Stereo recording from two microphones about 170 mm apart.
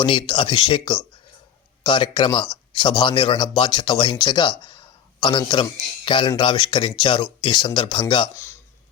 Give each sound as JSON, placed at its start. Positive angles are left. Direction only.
{"t": 0.0, "sound": "speech", "side_deg": 30}
{"t": 4.6, "sound": "a sound", "side_deg": 25}
{"t": 6.1, "sound": "speech", "side_deg": 25}